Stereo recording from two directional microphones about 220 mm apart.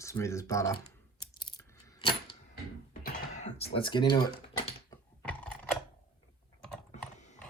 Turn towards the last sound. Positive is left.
turn(degrees=5)  # may be behind; listen again after turning